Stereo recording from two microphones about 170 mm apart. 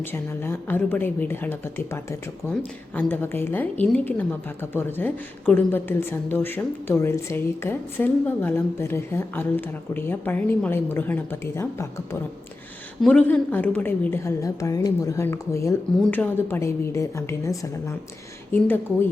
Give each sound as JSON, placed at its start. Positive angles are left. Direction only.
{"t": 0.0, "sound": "a woman's voice", "side_deg": 15}
{"t": 13.0, "sound": "a woman's voice", "side_deg": 5}